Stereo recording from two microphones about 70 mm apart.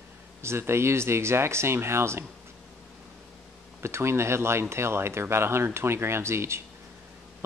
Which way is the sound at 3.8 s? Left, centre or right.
Right.